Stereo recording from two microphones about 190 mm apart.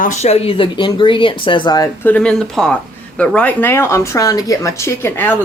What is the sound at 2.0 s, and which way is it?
Speech, 5° left (ahead or behind).